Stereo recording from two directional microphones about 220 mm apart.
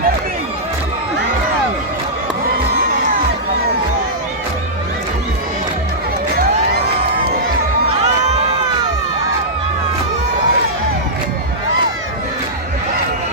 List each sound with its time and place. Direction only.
8.0 s crowd: 30° right (ahead or behind)